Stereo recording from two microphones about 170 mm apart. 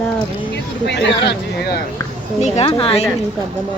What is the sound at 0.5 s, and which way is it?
Speech, 90° left.